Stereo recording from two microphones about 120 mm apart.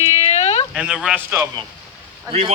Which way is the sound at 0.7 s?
5° right (ahead or behind).